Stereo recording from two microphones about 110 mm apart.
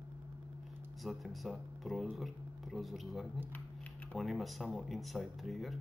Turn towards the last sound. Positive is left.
turn(degrees=0)  # may be behind; listen again after turning